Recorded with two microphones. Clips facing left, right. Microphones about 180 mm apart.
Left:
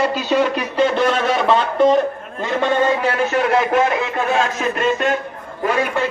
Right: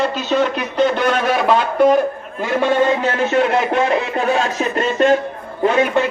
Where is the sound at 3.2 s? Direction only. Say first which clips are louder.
Right 1 dB; 25° right (ahead or behind).